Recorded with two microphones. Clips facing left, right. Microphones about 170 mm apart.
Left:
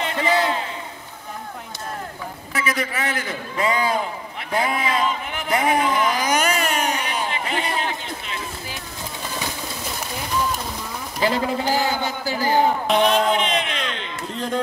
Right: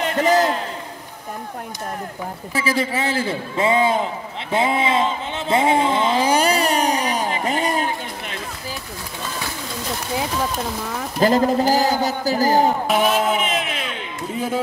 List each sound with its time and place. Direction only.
0.0 s a sound: 45° right (ahead or behind)
2.5 s a man's voice: 30° right (ahead or behind); by 8.4 s 45° right (ahead or behind)
11.1 s a man's voice: 45° right (ahead or behind)
12.8 s a man's voice: 5° right (ahead or behind)